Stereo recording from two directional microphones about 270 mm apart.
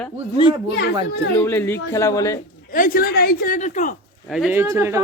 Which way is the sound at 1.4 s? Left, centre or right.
Centre.